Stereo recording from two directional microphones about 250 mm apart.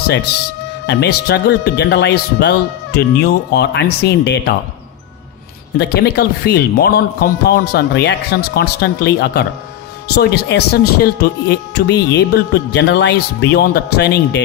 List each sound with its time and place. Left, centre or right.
0.9 s speech: left
5.7 s speech: left